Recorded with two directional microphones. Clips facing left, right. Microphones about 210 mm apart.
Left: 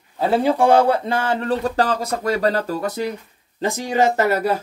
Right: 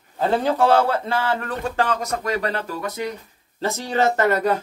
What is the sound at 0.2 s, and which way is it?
Speech, 10° left (ahead or behind).